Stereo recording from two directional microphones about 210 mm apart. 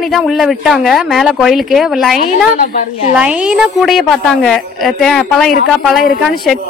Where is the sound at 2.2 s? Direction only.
45° left (ahead or behind).